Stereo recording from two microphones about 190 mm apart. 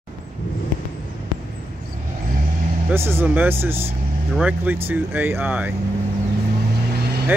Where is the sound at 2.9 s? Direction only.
10° right (ahead or behind).